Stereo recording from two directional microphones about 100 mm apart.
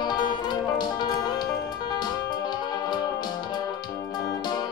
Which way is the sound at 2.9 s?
45° left (ahead or behind).